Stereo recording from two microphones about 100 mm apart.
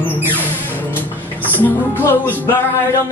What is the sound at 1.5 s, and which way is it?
Speech, 20° left (ahead or behind).